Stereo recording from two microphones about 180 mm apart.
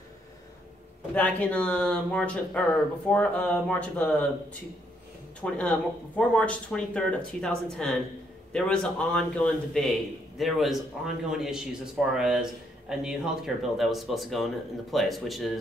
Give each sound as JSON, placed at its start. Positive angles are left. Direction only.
{"t": 1.1, "sound": "speech", "side_deg": 10}
{"t": 5.4, "sound": "speech", "side_deg": 5}